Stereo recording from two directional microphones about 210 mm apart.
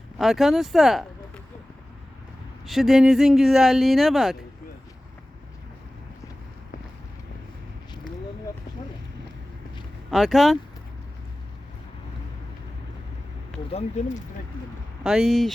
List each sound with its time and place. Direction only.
0.2 s speech: centre (ahead or behind)
2.6 s speech: centre (ahead or behind)
10.1 s speech: centre (ahead or behind)
13.7 s speech: 30° left (ahead or behind)
15.0 s speech: centre (ahead or behind)